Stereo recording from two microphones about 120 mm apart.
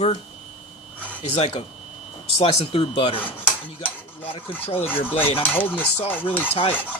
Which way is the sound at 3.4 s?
15° left (ahead or behind).